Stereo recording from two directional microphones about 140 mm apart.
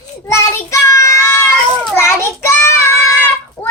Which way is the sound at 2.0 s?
20° left (ahead or behind).